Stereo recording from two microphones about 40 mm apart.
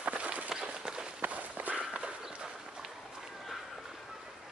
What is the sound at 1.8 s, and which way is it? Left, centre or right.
Horse, right.